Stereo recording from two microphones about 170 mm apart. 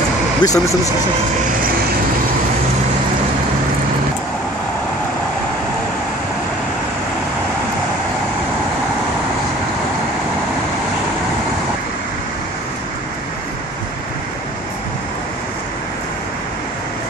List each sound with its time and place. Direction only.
0.4 s speech: 20° left (ahead or behind)